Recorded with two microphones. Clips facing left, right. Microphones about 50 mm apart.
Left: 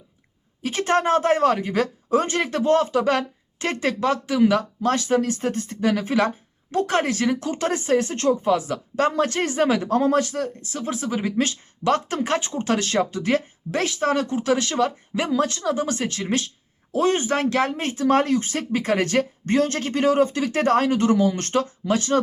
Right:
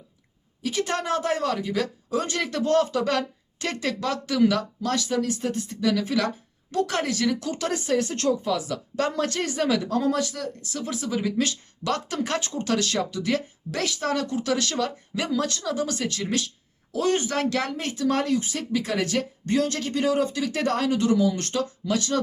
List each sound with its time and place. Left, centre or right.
0.6 s speech: left